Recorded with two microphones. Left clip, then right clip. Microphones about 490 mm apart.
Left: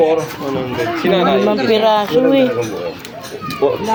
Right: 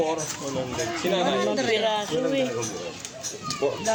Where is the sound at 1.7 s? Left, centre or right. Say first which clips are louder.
Left 11 dB; right.